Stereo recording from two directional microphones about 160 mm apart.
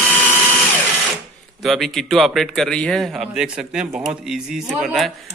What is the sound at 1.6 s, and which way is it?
A man's voice, centre (ahead or behind).